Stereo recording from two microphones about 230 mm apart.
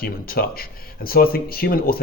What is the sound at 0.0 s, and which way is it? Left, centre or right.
A man's voice, left.